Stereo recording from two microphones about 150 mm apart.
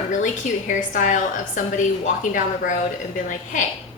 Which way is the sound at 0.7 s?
55° left (ahead or behind).